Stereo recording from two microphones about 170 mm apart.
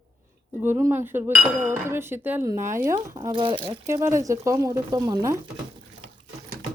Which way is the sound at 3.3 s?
30° right (ahead or behind).